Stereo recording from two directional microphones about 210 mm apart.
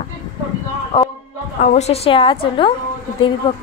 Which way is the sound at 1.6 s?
30° left (ahead or behind).